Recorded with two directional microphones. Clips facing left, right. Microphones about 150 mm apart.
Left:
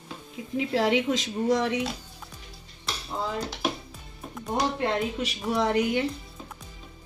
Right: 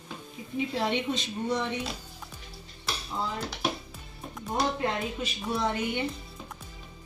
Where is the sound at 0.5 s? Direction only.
90° left.